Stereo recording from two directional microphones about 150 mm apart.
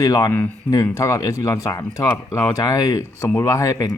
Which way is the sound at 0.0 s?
25° left (ahead or behind).